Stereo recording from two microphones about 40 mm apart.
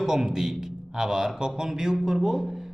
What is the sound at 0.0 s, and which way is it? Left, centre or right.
Speech, centre.